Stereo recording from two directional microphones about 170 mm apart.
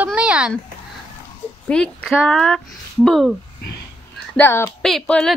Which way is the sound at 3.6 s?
80° left.